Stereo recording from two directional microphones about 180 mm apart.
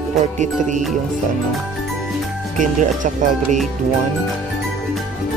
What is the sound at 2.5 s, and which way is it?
Speech, 45° right (ahead or behind).